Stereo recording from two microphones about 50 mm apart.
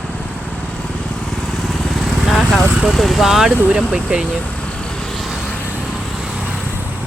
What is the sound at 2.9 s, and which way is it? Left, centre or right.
Speech, centre.